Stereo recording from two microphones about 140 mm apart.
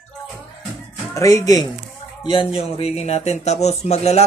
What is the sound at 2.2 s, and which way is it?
Speech, 40° left (ahead or behind).